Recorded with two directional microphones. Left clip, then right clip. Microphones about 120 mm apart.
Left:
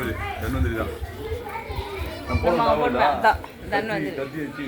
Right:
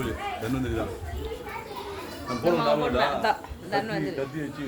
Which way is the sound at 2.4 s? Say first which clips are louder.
Left 4 dB; 40° right (ahead or behind).